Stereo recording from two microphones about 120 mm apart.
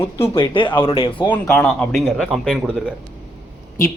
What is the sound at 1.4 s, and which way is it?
A man's voice, 10° left (ahead or behind).